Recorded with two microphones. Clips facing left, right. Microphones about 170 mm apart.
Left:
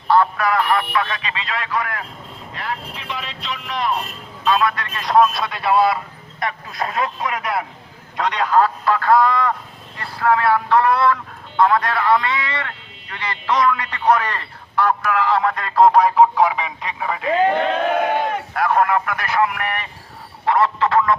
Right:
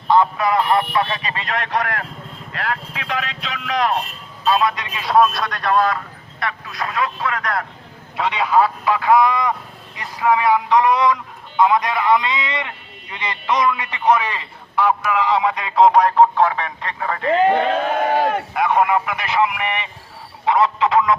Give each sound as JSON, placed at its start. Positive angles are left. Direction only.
{"t": 0.1, "sound": "speech", "side_deg": -20}
{"t": 1.2, "sound": "a man's voice", "side_deg": -45}
{"t": 2.6, "sound": "speech", "side_deg": -90}
{"t": 4.4, "sound": "a man's voice", "side_deg": -25}
{"t": 6.4, "sound": "speech", "side_deg": 25}
{"t": 8.1, "sound": "a man's voice", "side_deg": -5}
{"t": 18.5, "sound": "a man's voice", "side_deg": -5}